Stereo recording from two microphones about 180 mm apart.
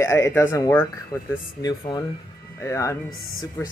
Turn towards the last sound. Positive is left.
turn(degrees=15)  # may be behind; listen again after turning